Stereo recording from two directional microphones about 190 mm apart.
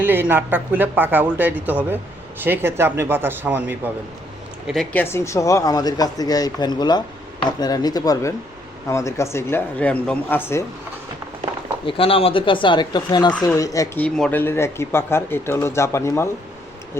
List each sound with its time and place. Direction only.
0.0 s speech: 10° right (ahead or behind)
4.6 s speech: centre (ahead or behind)
11.9 s speech: 30° left (ahead or behind)